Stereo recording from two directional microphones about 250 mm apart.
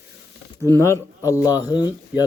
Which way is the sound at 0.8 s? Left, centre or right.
Centre.